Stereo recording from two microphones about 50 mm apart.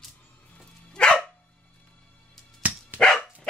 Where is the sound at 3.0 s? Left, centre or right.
Left.